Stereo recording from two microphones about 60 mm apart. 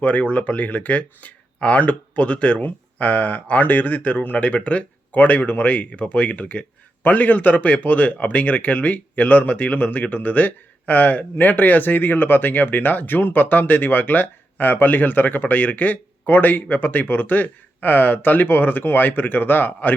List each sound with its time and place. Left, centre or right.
0.0 s speech: left